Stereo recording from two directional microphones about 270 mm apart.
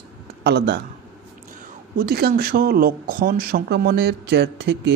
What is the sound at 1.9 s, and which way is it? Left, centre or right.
Speech, right.